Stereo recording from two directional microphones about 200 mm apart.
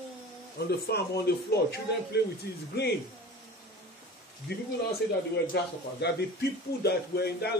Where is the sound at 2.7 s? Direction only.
55° left (ahead or behind).